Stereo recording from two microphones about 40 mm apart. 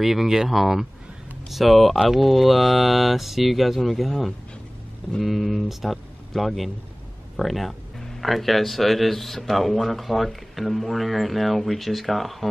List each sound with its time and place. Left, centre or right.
0.0 s speech: centre